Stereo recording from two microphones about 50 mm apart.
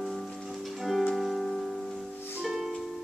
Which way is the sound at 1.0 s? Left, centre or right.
Centre.